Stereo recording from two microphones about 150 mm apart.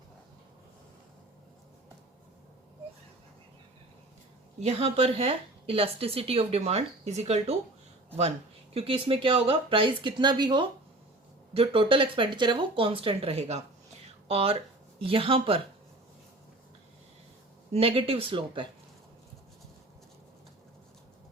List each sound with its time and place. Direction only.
4.6 s a woman's voice: 40° right (ahead or behind)
8.7 s a woman's voice: 40° right (ahead or behind)
17.7 s a woman's voice: 40° right (ahead or behind)